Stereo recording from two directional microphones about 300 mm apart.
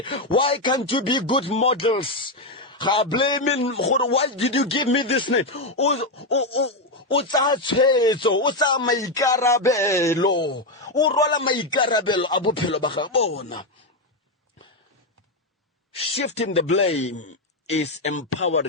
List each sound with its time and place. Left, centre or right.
0.0 s speech: centre
13.1 s speech: left
15.9 s speech: centre